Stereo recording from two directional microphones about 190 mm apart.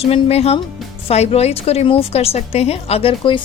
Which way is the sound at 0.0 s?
30° left (ahead or behind).